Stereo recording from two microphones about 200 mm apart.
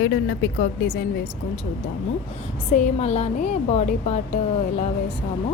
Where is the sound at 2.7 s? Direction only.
35° left (ahead or behind).